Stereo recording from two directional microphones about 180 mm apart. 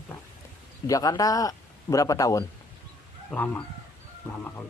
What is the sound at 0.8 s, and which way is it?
Speech, 20° left (ahead or behind).